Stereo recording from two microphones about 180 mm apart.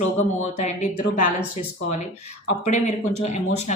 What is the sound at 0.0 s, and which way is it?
Speech, 40° left (ahead or behind).